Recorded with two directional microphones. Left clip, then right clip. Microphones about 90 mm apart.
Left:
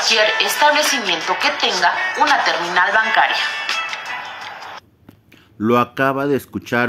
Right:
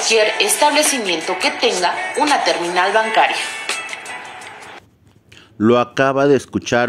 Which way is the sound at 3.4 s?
5° left (ahead or behind).